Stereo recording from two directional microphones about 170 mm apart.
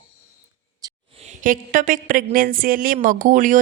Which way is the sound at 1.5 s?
50° right (ahead or behind).